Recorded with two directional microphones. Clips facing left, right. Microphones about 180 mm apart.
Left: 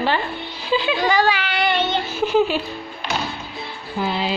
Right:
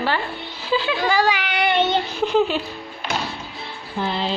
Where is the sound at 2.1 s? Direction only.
10° left (ahead or behind).